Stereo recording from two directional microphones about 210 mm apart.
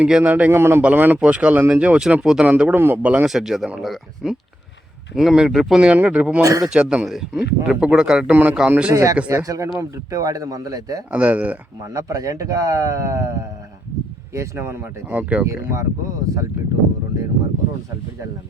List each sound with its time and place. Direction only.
0.0 s a man's voice: 5° right (ahead or behind)
11.1 s speech: 5° right (ahead or behind)
14.3 s speech: 10° right (ahead or behind)